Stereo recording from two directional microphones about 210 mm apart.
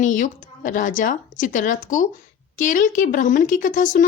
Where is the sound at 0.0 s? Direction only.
40° left (ahead or behind).